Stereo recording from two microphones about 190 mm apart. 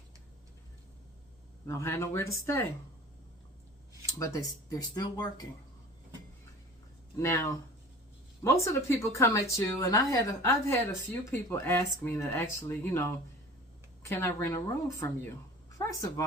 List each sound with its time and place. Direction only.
1.6 s speech: 15° left (ahead or behind)
4.2 s speech: 20° left (ahead or behind)
7.2 s speech: 15° left (ahead or behind)